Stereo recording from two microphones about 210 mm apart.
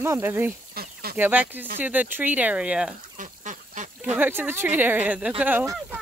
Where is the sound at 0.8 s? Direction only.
45° right (ahead or behind).